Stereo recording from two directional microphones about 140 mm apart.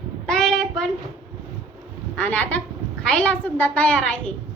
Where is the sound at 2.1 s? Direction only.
10° left (ahead or behind).